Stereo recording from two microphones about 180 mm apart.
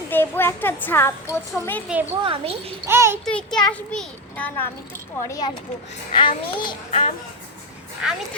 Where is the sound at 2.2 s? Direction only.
30° right (ahead or behind).